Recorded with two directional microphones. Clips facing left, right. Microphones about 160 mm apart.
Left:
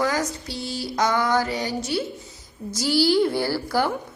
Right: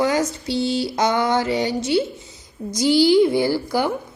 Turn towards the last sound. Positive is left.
turn(degrees=-15)  # may be behind; listen again after turning